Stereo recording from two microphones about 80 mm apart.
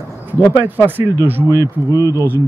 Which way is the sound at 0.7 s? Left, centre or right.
Right.